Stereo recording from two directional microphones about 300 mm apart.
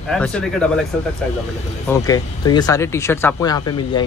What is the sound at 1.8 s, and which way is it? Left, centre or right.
Speech, centre.